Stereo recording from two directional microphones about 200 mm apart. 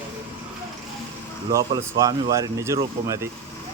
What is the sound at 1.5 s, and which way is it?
Speech, 15° right (ahead or behind).